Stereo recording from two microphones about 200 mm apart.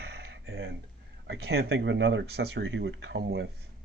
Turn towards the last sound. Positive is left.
turn(degrees=-65)  # may be behind; listen again after turning